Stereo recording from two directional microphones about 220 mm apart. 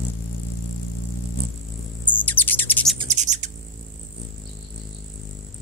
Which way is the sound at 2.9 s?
30° right (ahead or behind).